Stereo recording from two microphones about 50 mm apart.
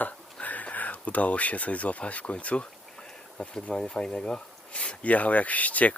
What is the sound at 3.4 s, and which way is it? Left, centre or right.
Speech, left.